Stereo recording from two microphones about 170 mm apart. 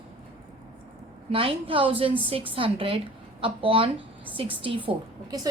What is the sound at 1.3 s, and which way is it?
A woman's voice, 30° right (ahead or behind).